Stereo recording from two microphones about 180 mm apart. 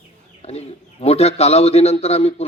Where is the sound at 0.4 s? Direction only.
35° left (ahead or behind).